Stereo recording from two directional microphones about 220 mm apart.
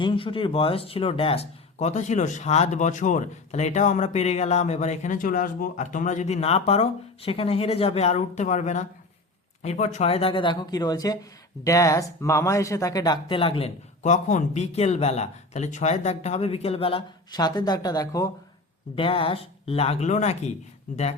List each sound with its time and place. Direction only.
0.0 s speech: 25° left (ahead or behind)